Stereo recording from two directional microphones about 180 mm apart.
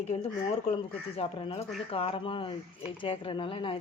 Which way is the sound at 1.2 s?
30° left (ahead or behind).